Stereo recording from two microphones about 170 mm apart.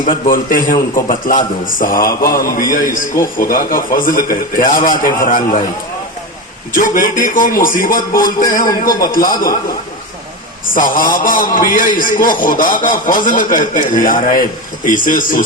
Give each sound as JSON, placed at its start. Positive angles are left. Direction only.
{"t": 0.0, "sound": "a man's voice", "side_deg": 55}
{"t": 6.7, "sound": "a man's voice", "side_deg": 55}
{"t": 10.8, "sound": "speech", "side_deg": 55}